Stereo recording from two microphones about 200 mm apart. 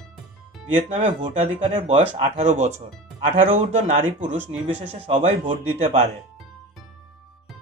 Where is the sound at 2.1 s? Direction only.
35° right (ahead or behind).